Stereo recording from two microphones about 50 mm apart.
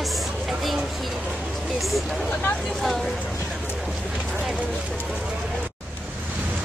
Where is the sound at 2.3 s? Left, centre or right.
Left.